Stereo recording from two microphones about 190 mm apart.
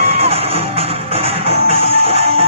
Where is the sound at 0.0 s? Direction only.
30° right (ahead or behind).